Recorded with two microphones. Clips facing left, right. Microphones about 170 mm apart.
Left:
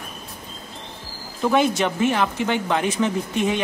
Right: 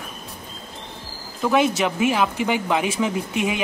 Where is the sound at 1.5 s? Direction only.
Centre (ahead or behind).